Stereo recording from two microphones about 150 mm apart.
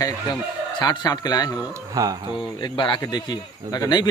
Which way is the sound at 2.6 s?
30° left (ahead or behind).